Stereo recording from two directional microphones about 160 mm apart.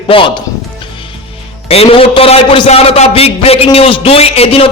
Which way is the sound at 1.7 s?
35° left (ahead or behind).